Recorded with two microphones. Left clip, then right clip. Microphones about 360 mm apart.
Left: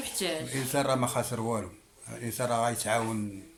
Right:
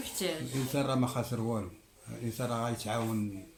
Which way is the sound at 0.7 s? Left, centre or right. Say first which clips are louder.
Left 5 dB; centre.